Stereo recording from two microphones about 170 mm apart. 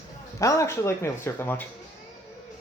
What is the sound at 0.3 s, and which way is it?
Speech, 20° left (ahead or behind).